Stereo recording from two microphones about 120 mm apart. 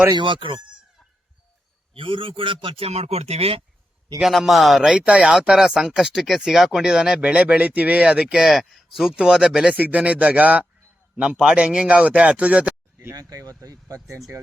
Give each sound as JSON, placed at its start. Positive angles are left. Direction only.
{"t": 0.1, "sound": "a man's voice", "side_deg": -45}
{"t": 2.0, "sound": "a man's voice", "side_deg": -45}
{"t": 4.2, "sound": "speech", "side_deg": 0}
{"t": 13.1, "sound": "speech", "side_deg": -30}